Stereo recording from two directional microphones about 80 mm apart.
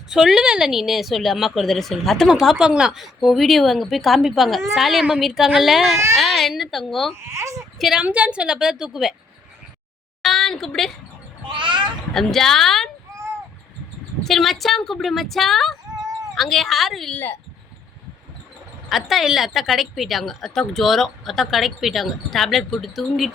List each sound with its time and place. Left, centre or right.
0.1 s a woman's voice: centre
7.2 s speech: right
7.8 s a woman's voice: centre
8.0 s a woman's voice: centre
10.2 s a sound: centre
11.4 s a sound: right
12.1 s a woman's voice: centre
14.3 s a woman's voice: centre
18.9 s a woman's voice: centre